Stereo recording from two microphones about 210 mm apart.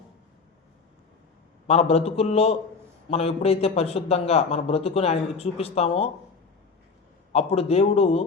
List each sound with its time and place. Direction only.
1.6 s a man's voice: 30° left (ahead or behind)
7.3 s a man's voice: 30° left (ahead or behind)